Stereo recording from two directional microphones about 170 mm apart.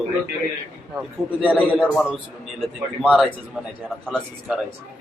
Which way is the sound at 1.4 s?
5° right (ahead or behind).